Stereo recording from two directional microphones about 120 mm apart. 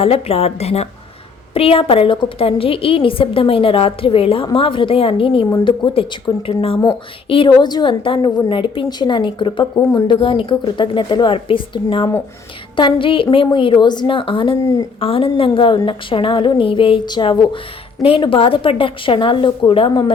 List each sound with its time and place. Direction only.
0.0 s a woman's voice: 55° left (ahead or behind)
14.6 s a woman's voice: 30° left (ahead or behind)
15.0 s speech: 50° left (ahead or behind)